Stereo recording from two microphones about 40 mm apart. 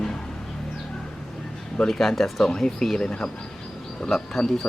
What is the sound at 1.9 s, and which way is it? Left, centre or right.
Speech, centre.